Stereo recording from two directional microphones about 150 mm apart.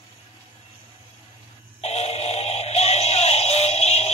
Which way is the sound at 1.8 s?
45° left (ahead or behind).